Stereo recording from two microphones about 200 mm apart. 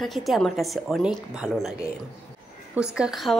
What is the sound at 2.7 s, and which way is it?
Speech, 5° right (ahead or behind).